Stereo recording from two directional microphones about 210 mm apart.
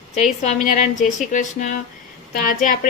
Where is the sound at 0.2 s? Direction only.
35° left (ahead or behind).